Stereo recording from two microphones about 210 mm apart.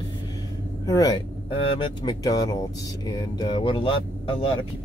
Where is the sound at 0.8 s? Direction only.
15° left (ahead or behind).